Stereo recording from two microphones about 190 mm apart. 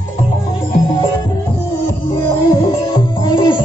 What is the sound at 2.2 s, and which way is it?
Music, 20° left (ahead or behind).